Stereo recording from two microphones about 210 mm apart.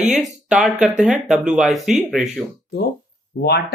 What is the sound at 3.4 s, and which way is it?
Speech, 50° left (ahead or behind).